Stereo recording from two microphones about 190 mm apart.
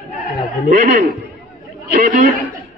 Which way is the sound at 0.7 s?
40° right (ahead or behind).